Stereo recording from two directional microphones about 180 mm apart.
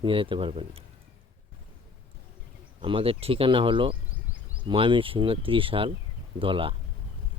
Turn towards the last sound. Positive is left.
turn(degrees=-30)  # may be behind; listen again after turning